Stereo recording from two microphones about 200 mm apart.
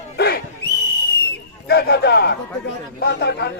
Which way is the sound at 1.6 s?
55° left (ahead or behind).